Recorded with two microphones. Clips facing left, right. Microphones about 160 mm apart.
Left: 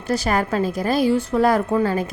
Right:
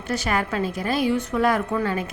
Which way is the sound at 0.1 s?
35° left (ahead or behind).